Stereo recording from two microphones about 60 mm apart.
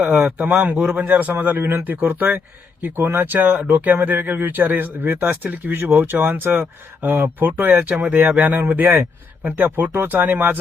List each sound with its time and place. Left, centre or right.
0.0 s speech: right
0.3 s a man's voice: right